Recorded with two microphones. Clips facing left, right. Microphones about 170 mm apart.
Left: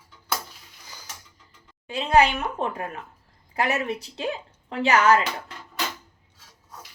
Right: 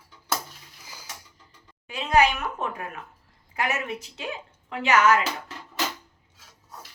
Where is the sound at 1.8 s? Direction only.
30° left (ahead or behind).